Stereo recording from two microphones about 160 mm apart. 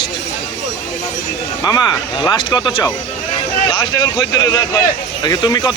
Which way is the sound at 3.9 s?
20° left (ahead or behind).